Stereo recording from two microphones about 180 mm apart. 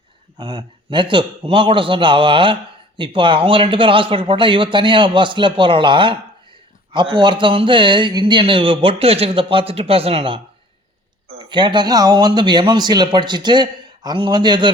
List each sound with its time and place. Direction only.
0.3 s speech: 25° right (ahead or behind)
11.4 s speech: 25° right (ahead or behind)